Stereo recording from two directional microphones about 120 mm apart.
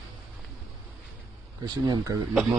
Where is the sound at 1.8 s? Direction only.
30° right (ahead or behind).